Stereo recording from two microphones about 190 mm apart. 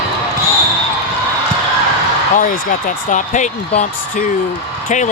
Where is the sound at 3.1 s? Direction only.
40° left (ahead or behind).